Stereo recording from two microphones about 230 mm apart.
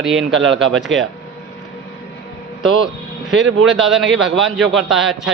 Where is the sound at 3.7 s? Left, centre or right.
Centre.